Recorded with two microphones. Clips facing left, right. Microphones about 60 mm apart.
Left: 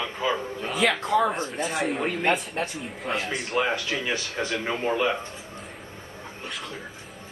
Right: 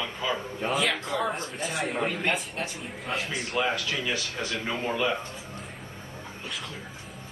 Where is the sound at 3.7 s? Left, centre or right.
Left.